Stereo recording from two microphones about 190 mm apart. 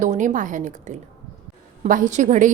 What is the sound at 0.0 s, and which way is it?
A woman's voice, 40° right (ahead or behind).